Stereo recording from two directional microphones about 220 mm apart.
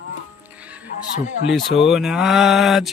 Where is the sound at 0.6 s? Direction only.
5° right (ahead or behind).